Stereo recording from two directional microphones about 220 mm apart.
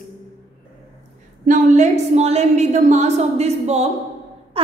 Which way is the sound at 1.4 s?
35° right (ahead or behind).